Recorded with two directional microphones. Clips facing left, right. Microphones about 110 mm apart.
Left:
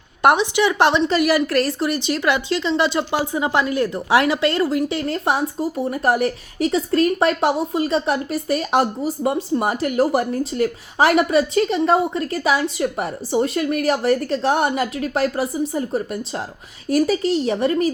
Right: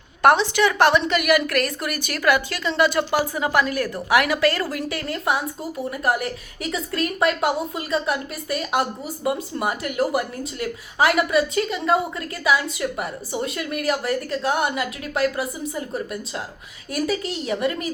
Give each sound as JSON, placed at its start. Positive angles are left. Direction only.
{"t": 0.2, "sound": "a woman's voice", "side_deg": 20}
{"t": 16.9, "sound": "a woman's voice", "side_deg": 35}